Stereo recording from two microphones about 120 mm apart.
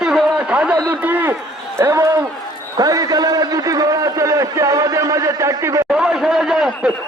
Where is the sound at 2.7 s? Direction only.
30° right (ahead or behind).